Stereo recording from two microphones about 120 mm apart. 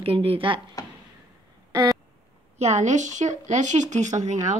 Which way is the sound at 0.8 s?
30° left (ahead or behind).